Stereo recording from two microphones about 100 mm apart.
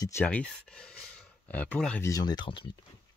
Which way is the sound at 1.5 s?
15° left (ahead or behind).